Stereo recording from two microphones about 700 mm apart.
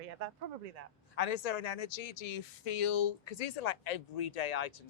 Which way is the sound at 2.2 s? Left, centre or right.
Left.